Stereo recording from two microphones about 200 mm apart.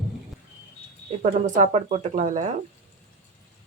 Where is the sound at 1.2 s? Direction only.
35° right (ahead or behind).